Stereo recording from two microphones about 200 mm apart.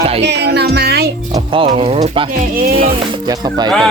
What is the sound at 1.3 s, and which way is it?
Speech, 25° right (ahead or behind).